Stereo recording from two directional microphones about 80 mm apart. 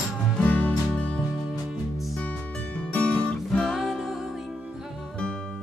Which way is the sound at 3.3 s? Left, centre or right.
Centre.